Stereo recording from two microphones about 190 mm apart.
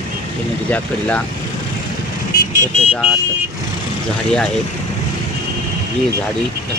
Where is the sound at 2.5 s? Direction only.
40° left (ahead or behind).